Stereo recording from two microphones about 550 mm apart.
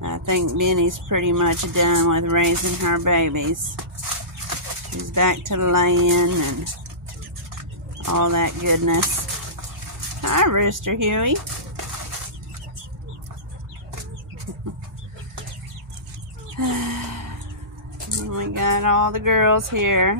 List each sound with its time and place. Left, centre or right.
0.0 s speech: right
5.1 s speech: right
8.0 s speech: right
10.2 s speech: right
16.5 s a sound: right
18.3 s speech: right